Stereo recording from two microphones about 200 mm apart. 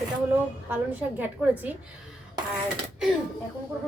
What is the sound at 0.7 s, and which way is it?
A woman's voice, 10° right (ahead or behind).